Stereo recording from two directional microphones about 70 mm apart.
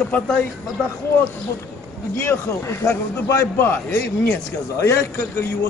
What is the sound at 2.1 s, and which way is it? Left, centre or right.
Speech, left.